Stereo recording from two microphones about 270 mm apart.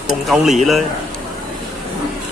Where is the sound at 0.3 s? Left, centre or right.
Centre.